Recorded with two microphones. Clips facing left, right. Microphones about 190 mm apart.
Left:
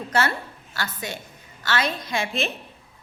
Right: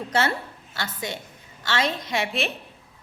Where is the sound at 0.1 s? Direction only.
25° right (ahead or behind).